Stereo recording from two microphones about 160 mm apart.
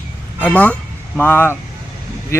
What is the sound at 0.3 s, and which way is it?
Speech, 10° left (ahead or behind).